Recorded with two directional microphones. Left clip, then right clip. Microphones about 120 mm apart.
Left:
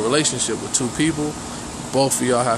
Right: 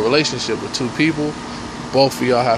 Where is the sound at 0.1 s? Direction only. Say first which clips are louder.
Right 3 dB; 20° left (ahead or behind).